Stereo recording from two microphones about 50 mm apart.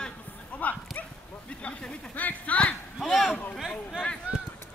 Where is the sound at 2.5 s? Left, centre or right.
Left.